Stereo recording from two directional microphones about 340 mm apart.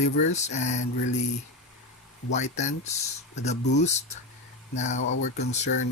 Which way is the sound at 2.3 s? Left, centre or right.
Left.